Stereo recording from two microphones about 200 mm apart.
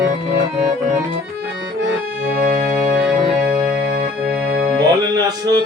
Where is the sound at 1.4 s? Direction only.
60° right (ahead or behind).